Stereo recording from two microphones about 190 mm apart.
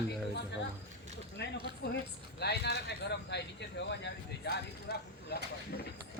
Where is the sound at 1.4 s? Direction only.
65° left (ahead or behind).